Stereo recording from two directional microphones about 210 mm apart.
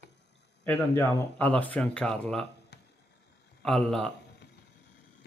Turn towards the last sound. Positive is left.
turn(degrees=5)  # may be behind; listen again after turning